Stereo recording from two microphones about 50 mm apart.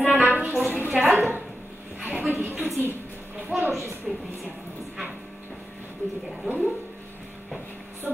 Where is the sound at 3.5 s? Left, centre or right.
Centre.